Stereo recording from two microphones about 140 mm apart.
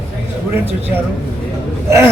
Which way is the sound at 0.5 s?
15° right (ahead or behind).